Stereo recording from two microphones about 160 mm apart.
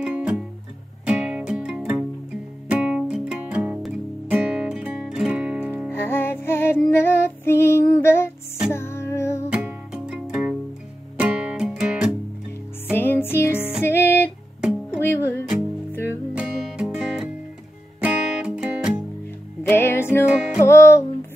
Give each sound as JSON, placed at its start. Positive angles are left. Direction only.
{"t": 0.0, "sound": "music", "side_deg": -5}
{"t": 5.9, "sound": "music", "side_deg": 15}
{"t": 9.5, "sound": "music", "side_deg": -10}
{"t": 12.9, "sound": "music", "side_deg": 15}
{"t": 14.6, "sound": "music", "side_deg": -5}
{"t": 15.0, "sound": "music", "side_deg": 15}
{"t": 16.3, "sound": "music", "side_deg": -5}
{"t": 19.7, "sound": "music", "side_deg": 15}